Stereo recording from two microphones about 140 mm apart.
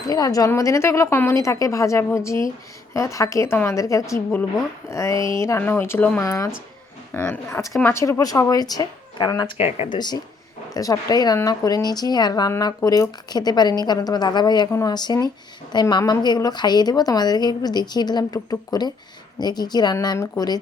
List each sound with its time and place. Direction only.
0.1 s speech: 25° left (ahead or behind)
4.1 s speech: 10° left (ahead or behind); by 9.5 s 30° left (ahead or behind)
9.6 s speech: 45° left (ahead or behind)
9.9 s speech: 30° left (ahead or behind)